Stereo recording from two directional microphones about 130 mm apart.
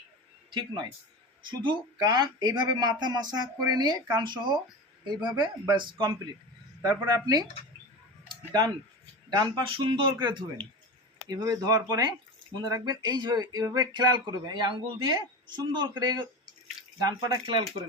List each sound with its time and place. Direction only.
0.5 s speech: 35° right (ahead or behind)
8.3 s a sound: 30° right (ahead or behind)
9.3 s speech: 30° right (ahead or behind)
9.7 s speech: 40° right (ahead or behind)